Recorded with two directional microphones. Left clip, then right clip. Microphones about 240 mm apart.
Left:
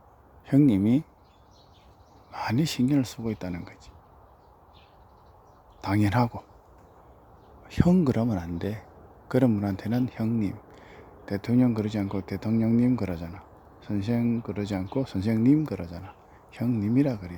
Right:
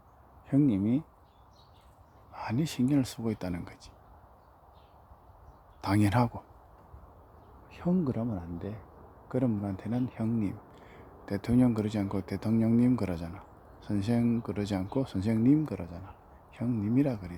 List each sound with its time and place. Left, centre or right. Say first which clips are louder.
0.4 s speech: left 5 dB; centre
2.3 s speech: left 6 dB; centre
5.8 s speech: left 2 dB; centre
7.7 s speech: left 8 dB; left; by 17.3 s centre